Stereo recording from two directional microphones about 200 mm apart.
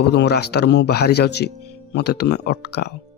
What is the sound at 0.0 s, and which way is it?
Speech, 55° left (ahead or behind).